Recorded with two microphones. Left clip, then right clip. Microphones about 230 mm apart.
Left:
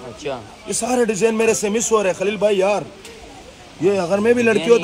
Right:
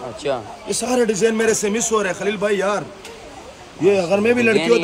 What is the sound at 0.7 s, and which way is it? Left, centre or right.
A man's voice, centre.